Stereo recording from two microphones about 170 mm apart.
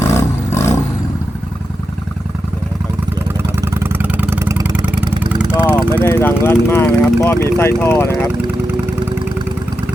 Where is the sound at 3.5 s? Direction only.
15° right (ahead or behind).